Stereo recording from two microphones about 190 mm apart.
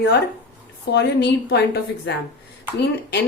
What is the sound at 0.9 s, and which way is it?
Speech, 60° left (ahead or behind).